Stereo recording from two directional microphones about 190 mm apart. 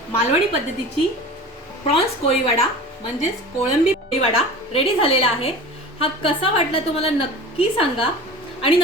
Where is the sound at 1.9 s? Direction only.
30° left (ahead or behind).